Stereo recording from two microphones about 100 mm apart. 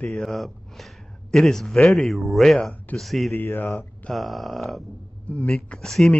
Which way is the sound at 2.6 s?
15° left (ahead or behind).